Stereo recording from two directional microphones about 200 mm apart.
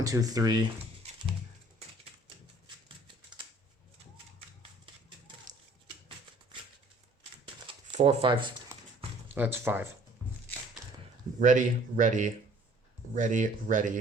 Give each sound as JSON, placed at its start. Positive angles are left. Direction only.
{"t": 0.0, "sound": "speech", "side_deg": -15}
{"t": 7.7, "sound": "speech", "side_deg": -30}
{"t": 9.3, "sound": "speech", "side_deg": -10}
{"t": 11.3, "sound": "speech", "side_deg": -40}